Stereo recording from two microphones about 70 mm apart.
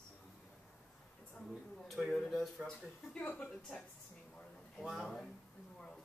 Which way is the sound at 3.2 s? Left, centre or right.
Centre.